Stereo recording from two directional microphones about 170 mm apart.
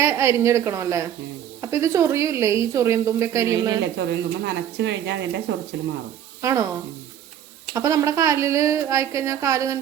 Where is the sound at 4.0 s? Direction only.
90° right.